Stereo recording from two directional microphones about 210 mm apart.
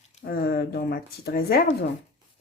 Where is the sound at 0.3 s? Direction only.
45° left (ahead or behind).